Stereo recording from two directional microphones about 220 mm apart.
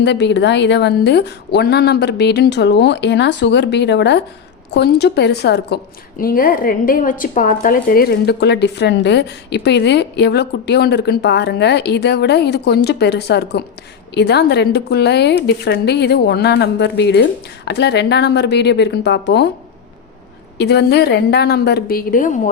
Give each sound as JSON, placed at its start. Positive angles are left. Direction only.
{"t": 0.0, "sound": "a woman's voice", "side_deg": 50}
{"t": 20.6, "sound": "a woman's voice", "side_deg": 50}